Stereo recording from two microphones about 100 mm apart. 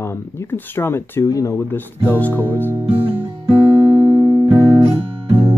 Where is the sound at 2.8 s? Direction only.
60° right (ahead or behind).